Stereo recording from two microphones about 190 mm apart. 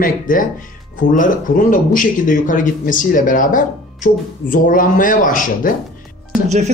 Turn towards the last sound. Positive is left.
turn(degrees=-35)  # may be behind; listen again after turning